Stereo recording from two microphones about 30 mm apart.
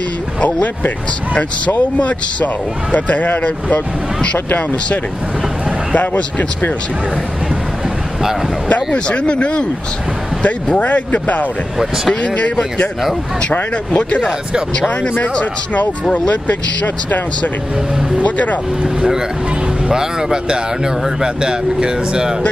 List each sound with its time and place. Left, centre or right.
0.4 s speech: left
2.0 s speech: left
8.6 s speech: left
10.4 s speech: left
12.2 s speech: left
15.7 s speech: left
18.2 s speech: left
19.9 s speech: centre